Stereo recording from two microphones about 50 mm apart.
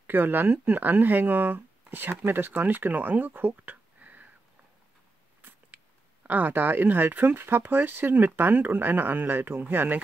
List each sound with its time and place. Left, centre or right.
0.0 s speech: right
6.2 s speech: right